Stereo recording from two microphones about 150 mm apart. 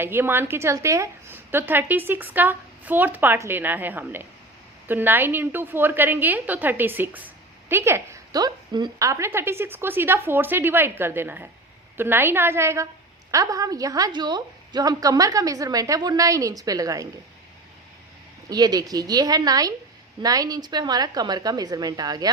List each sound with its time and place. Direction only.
0.0 s a woman's voice: 15° right (ahead or behind)
18.4 s a woman's voice: 25° right (ahead or behind)